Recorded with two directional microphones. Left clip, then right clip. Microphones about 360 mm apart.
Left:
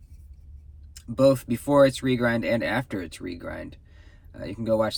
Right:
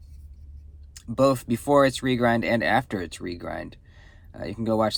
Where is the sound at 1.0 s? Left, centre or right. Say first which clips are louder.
Left 1 dB; centre.